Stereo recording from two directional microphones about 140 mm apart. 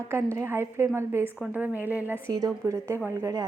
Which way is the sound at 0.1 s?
20° right (ahead or behind).